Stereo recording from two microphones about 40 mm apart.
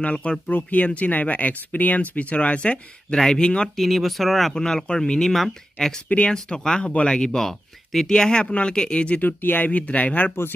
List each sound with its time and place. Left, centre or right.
0.0 s speech: left
0.5 s speech: left
3.7 s speech: centre; by 5.2 s left
5.2 s speech: centre
6.2 s speech: left
7.2 s speech: centre
8.1 s speech: centre
9.2 s speech: left
9.7 s speech: left